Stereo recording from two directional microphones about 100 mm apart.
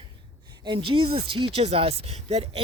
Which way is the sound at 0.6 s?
55° right (ahead or behind).